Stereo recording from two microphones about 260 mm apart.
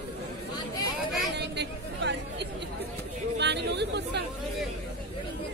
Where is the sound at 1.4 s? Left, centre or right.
Right.